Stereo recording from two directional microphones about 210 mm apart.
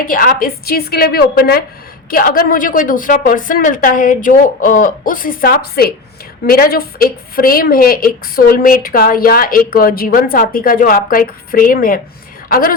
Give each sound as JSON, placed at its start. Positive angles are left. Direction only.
{"t": 0.1, "sound": "a woman's voice", "side_deg": 40}